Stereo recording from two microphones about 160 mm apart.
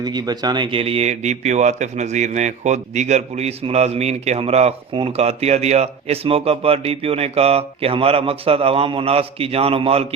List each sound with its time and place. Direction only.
0.0 s speech: 25° right (ahead or behind)